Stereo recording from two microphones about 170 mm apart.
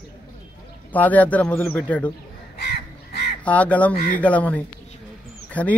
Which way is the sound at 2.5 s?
65° left (ahead or behind).